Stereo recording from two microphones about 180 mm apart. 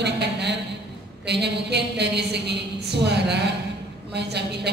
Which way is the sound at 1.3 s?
70° right (ahead or behind).